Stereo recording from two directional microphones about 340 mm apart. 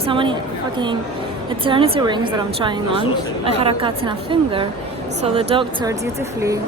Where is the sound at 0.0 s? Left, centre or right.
Centre.